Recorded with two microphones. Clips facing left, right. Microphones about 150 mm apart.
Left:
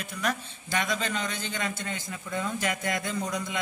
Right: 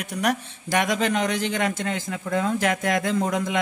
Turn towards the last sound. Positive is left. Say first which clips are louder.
# right 8 dB
turn(degrees=-90)